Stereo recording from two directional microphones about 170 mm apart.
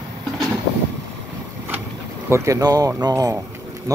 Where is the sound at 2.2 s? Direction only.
15° right (ahead or behind).